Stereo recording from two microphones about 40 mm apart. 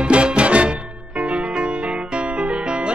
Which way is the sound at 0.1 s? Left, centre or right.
Right.